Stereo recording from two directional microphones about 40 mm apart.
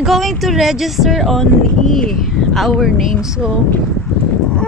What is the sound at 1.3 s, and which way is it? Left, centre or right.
Speech, centre.